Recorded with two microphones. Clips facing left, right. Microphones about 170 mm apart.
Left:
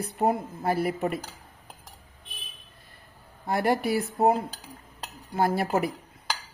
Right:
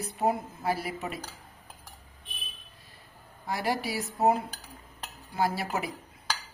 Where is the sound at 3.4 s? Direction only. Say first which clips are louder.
Left 6 dB; 55° left (ahead or behind).